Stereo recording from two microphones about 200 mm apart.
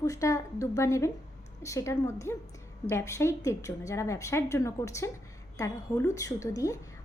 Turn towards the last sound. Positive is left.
turn(degrees=15)  # may be behind; listen again after turning